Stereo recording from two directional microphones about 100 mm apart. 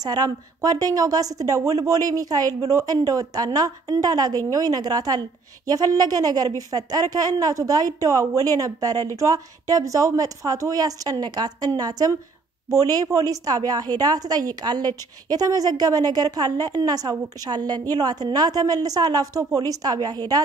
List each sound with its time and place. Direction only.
0.0 s a woman's voice: 40° right (ahead or behind)